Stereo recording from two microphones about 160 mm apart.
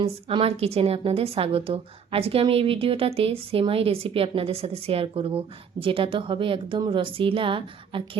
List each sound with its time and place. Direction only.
0.0 s a woman's voice: 35° right (ahead or behind)